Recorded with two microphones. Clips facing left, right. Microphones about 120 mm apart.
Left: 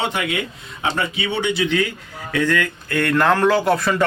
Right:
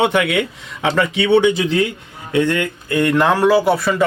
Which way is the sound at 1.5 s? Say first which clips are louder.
Right 2 dB; 35° right (ahead or behind).